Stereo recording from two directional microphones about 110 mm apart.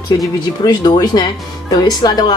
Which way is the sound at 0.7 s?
35° left (ahead or behind).